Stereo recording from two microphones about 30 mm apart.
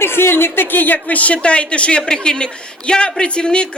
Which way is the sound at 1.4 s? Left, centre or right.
Left.